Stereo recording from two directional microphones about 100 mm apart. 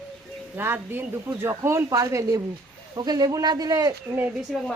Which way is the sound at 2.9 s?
45° right (ahead or behind).